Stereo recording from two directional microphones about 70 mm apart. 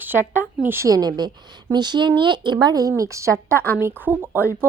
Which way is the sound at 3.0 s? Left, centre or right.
Right.